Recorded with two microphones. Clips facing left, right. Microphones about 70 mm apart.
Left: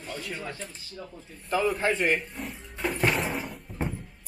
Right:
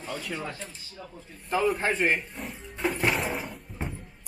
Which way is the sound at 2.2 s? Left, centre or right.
Centre.